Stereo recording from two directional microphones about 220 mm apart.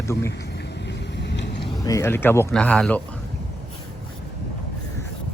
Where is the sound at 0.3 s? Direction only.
50° left (ahead or behind).